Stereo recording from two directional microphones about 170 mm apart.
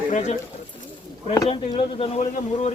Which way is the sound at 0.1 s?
45° left (ahead or behind).